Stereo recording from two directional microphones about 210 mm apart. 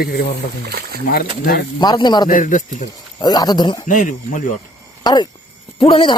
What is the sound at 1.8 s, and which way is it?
Speech, 20° left (ahead or behind).